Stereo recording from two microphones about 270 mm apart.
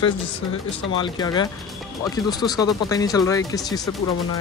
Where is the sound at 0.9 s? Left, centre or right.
Centre.